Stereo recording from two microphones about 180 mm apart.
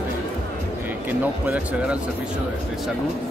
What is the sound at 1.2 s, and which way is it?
Speech, 10° right (ahead or behind).